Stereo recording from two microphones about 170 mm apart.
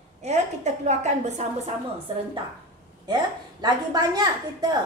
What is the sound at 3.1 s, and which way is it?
A woman's voice, 25° right (ahead or behind).